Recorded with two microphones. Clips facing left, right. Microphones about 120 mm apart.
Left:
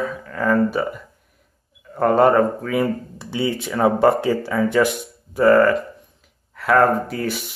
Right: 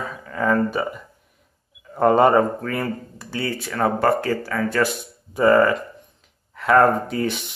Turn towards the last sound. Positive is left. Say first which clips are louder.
# even
turn(degrees=5)  # may be behind; listen again after turning